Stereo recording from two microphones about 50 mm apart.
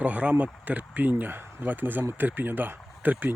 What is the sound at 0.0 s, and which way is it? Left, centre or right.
Speech, right.